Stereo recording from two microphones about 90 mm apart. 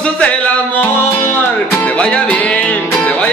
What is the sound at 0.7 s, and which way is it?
Music, 20° left (ahead or behind).